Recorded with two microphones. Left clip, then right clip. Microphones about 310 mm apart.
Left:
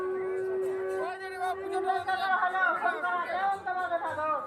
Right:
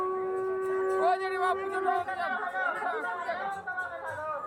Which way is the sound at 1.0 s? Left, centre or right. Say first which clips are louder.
Right 7 dB; centre.